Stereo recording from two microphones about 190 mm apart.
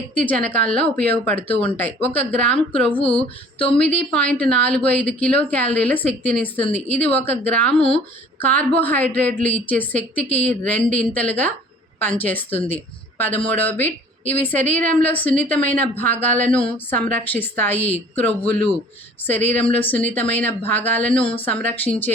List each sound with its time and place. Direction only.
0.1 s a woman's voice: 10° left (ahead or behind)
3.1 s a sound: 5° left (ahead or behind)
3.8 s a woman's voice: 5° left (ahead or behind)
7.8 s speech: 30° left (ahead or behind)
8.4 s a woman's voice: 10° left (ahead or behind)